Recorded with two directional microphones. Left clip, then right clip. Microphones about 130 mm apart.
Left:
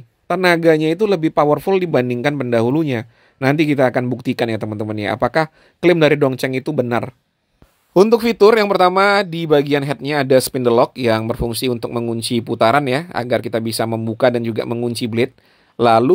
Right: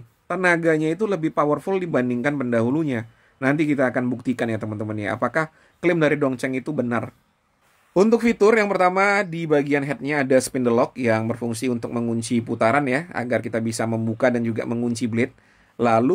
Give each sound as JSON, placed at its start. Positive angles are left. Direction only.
{"t": 0.3, "sound": "speech", "side_deg": 40}
{"t": 7.9, "sound": "speech", "side_deg": 30}